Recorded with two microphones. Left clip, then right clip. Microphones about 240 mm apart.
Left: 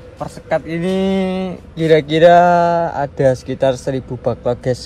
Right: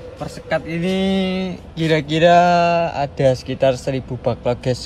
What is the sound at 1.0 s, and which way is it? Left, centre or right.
Speech, centre.